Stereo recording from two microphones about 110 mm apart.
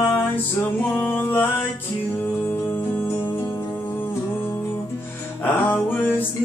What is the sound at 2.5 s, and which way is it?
Music, 20° left (ahead or behind).